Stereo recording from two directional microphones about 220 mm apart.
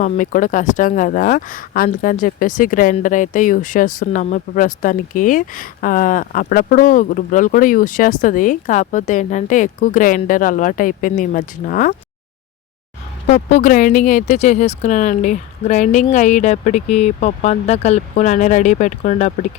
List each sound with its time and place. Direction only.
0.0 s speech: 35° left (ahead or behind)
13.2 s speech: 30° left (ahead or behind)